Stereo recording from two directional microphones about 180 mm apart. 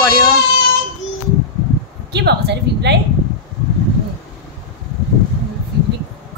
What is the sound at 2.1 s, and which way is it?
Speech, 70° right (ahead or behind).